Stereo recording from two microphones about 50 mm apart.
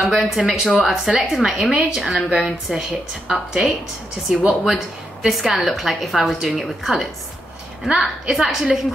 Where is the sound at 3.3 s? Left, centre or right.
Centre.